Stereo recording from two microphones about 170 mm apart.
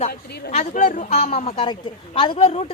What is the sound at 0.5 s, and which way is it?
A woman's voice, 40° left (ahead or behind).